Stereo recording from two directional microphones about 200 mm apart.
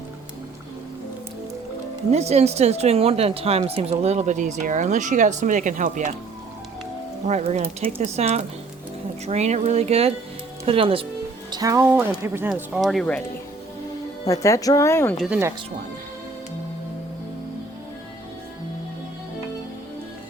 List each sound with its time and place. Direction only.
2.0 s speech: 30° right (ahead or behind)
7.3 s speech: 35° right (ahead or behind)
11.5 s speech: 15° right (ahead or behind); by 13.2 s 5° left (ahead or behind)
14.3 s speech: 15° left (ahead or behind)